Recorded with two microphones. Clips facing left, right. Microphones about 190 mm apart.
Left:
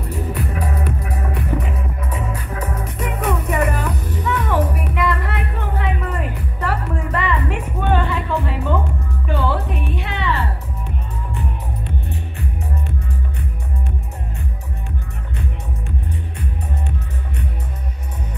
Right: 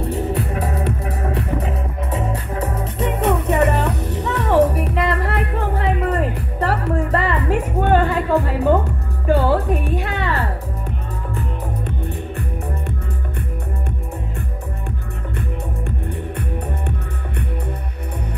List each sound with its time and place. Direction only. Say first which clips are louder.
0.3 s music: right 2 dB; 25° right (ahead or behind); by 10.3 s 45° right (ahead or behind)
11.8 s music: right 2 dB; 55° right (ahead or behind)